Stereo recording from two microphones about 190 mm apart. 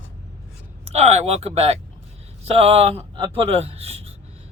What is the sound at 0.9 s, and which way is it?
A man's voice, 35° right (ahead or behind).